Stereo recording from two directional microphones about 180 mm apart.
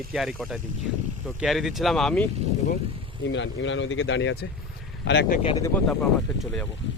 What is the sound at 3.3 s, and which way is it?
Speech, 90° left.